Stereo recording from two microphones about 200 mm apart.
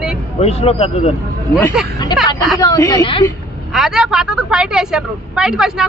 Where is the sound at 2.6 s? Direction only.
20° left (ahead or behind).